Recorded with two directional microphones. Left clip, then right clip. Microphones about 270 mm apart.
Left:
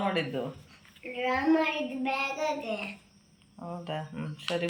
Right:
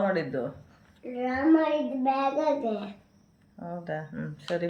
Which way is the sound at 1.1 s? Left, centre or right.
Centre.